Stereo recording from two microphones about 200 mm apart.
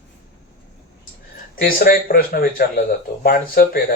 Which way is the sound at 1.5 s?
50° left (ahead or behind).